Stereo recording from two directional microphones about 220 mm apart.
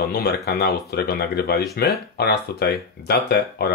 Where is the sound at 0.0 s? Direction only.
45° left (ahead or behind).